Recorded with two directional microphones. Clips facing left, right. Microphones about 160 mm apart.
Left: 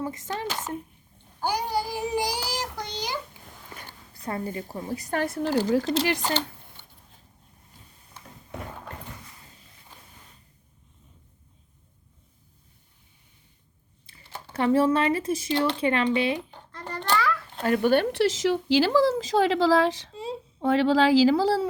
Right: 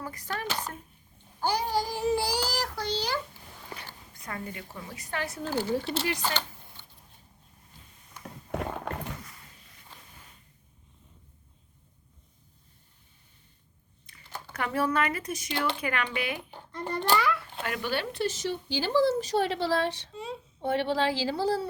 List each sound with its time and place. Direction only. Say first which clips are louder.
0.0 s speech: left 5 dB; 20° left (ahead or behind)
1.4 s child singing: left 1 dB; 10° left (ahead or behind)
3.8 s a woman's voice: left 1 dB; 35° left (ahead or behind); by 5.4 s 50° left (ahead or behind)
5.4 s speech: left 6 dB; 85° left
14.1 s speech: left 1 dB; 30° left (ahead or behind)
16.5 s a sound: right 3 dB; 10° right (ahead or behind)
17.6 s speech: left 10 dB; 40° left (ahead or behind)
17.9 s a woman's voice: left 10 dB; 55° left (ahead or behind)
18.2 s speech: left 7 dB; 90° left